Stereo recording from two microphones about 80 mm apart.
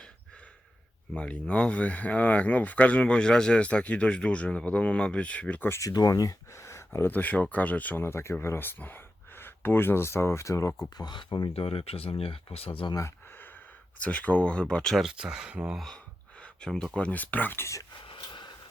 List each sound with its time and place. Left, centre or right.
1.1 s speech: centre
5.6 s speech: left
5.9 s speech: left
7.1 s speech: left
8.0 s speech: left
10.8 s speech: left
12.9 s speech: left
14.0 s speech: centre
15.0 s speech: centre
16.4 s speech: centre
18.0 s a sound: left